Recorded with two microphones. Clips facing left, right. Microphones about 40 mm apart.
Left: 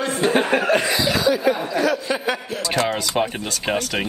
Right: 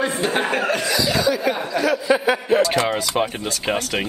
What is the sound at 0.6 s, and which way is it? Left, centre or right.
Chuckle, centre.